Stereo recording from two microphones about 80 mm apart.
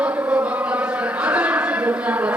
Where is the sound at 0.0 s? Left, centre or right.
Centre.